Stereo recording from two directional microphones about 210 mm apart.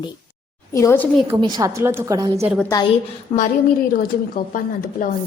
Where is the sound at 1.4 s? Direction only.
20° right (ahead or behind).